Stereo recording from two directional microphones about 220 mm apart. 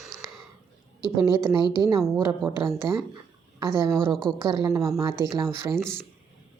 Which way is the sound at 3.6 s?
10° right (ahead or behind).